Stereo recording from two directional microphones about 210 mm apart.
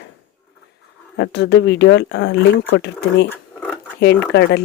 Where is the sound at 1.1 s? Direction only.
55° left (ahead or behind).